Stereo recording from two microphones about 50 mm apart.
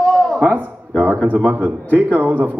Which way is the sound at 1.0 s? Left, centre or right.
Right.